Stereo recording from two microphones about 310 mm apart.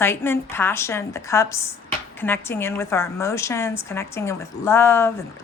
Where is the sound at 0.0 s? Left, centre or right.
Centre.